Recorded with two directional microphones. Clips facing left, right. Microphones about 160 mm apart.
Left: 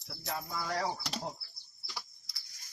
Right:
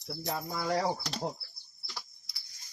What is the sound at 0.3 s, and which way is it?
Speech, 30° right (ahead or behind).